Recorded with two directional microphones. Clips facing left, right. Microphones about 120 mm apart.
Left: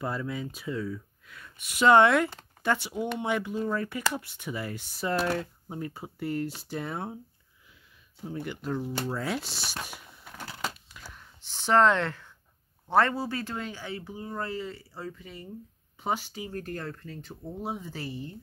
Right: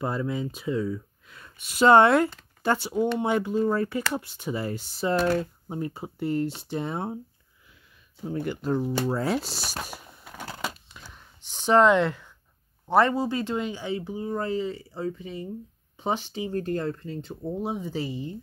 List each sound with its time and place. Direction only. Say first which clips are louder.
0.0 s speech: right 4 dB; 25° right (ahead or behind)
8.3 s speech: right 6 dB; 50° right (ahead or behind)
8.6 s speech: right 6 dB; 35° right (ahead or behind)
10.2 s a sound: right 2 dB; 15° right (ahead or behind)
12.9 s speech: right 3 dB; 15° right (ahead or behind)